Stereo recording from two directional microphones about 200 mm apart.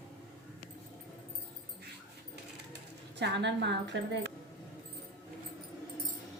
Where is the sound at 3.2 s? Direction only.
60° right (ahead or behind).